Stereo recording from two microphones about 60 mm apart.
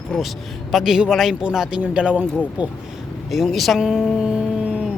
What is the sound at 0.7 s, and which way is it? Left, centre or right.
Speech, centre.